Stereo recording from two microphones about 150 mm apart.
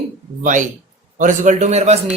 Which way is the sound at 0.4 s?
60° right (ahead or behind).